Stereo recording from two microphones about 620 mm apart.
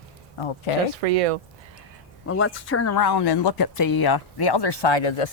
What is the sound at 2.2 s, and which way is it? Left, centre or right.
Speech, centre.